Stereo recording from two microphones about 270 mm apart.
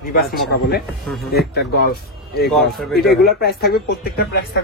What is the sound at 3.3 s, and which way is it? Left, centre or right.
Speech, left.